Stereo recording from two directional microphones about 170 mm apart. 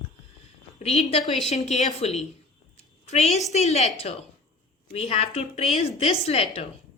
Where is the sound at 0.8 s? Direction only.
40° left (ahead or behind).